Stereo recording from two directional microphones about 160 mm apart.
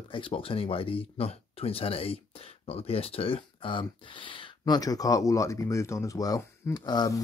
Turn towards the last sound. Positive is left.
turn(degrees=25)  # may be behind; listen again after turning